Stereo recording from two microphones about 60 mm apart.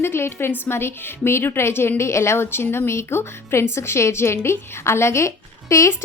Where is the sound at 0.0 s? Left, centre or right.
Left.